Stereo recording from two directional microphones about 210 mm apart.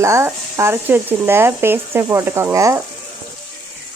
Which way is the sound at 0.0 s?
15° right (ahead or behind).